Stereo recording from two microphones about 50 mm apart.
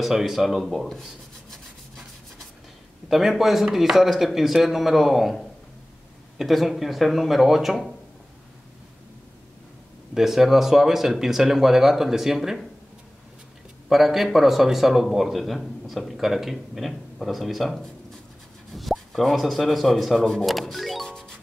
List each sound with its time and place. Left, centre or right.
0.0 s speech: centre
1.5 s rub: centre
3.1 s speech: centre
10.1 s speech: centre
13.8 s speech: centre
20.2 s music: centre
21.1 s music: centre